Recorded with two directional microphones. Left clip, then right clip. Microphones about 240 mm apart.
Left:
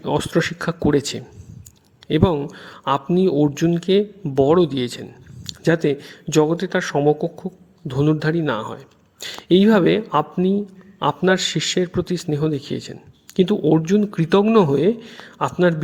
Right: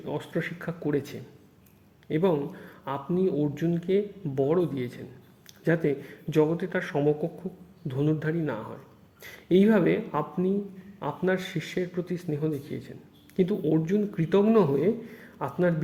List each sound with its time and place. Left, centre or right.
0.0 s a man's voice: left